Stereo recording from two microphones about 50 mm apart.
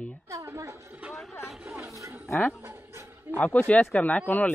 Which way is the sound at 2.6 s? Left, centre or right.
Right.